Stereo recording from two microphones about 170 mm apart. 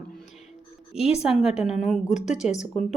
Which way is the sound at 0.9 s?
35° left (ahead or behind).